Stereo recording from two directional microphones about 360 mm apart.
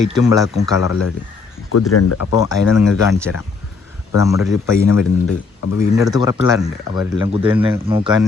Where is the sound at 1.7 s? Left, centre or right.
Left.